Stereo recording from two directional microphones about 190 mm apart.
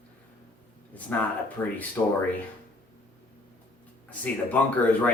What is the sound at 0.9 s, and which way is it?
Speech, 10° left (ahead or behind).